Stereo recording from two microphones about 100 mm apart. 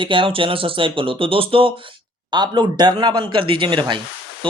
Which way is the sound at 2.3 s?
45° right (ahead or behind).